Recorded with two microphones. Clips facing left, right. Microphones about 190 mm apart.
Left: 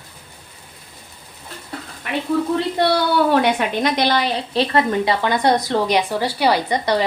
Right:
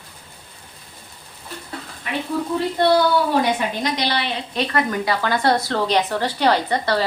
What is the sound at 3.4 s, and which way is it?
Speech, 60° left (ahead or behind).